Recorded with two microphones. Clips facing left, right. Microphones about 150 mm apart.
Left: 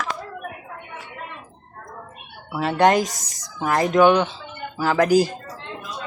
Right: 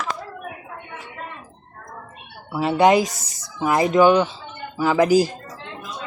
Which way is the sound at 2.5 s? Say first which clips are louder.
Right 2 dB; 5° right (ahead or behind).